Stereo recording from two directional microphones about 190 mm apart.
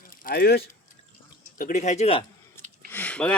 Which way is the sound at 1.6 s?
40° left (ahead or behind).